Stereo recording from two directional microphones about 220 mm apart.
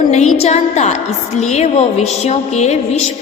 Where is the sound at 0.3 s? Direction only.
30° left (ahead or behind).